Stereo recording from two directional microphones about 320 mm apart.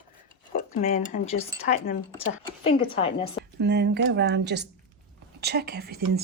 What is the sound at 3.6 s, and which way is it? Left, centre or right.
Speech, right.